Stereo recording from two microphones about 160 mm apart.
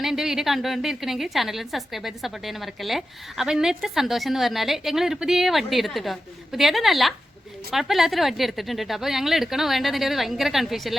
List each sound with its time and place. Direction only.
0.0 s a woman's voice: 5° right (ahead or behind)